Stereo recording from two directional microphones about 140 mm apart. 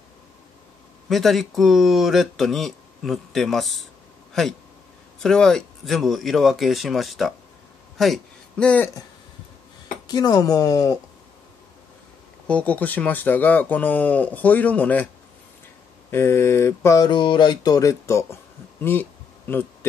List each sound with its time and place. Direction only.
1.0 s a man's voice: centre (ahead or behind)
10.0 s speech: 25° left (ahead or behind)
12.4 s speech: 10° left (ahead or behind)
16.1 s speech: 15° left (ahead or behind)
17.0 s speech: 35° left (ahead or behind); by 19.9 s 15° left (ahead or behind)